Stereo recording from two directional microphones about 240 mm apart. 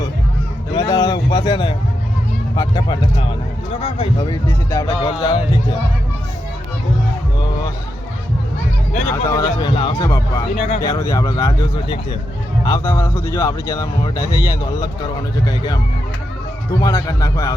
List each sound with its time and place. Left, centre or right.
0.7 s a sound: centre
2.6 s speech: centre
9.3 s speech: centre
16.8 s speech: centre